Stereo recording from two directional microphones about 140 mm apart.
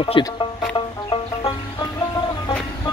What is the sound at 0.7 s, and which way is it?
Music, 35° left (ahead or behind).